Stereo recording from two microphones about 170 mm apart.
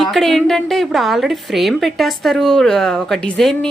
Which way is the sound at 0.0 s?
Centre (ahead or behind).